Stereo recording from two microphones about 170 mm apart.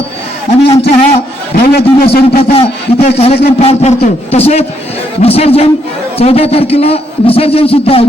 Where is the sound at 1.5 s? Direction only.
65° left (ahead or behind).